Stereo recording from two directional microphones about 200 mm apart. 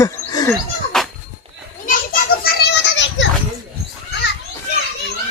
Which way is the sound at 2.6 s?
65° left (ahead or behind).